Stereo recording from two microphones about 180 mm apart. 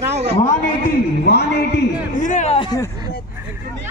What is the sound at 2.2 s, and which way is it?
Speech, 40° left (ahead or behind).